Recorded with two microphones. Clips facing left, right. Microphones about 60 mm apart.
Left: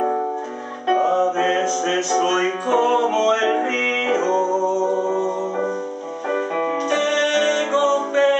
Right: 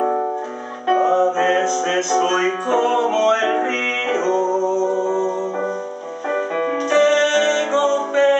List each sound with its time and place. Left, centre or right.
1.0 s music: centre